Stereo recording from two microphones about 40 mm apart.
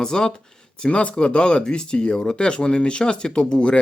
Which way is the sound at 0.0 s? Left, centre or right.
Centre.